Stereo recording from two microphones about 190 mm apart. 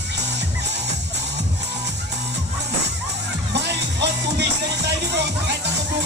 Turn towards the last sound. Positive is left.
turn(degrees=-65)  # may be behind; listen again after turning